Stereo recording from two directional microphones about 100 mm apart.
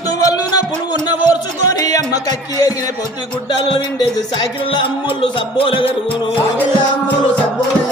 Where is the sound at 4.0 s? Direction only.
40° left (ahead or behind).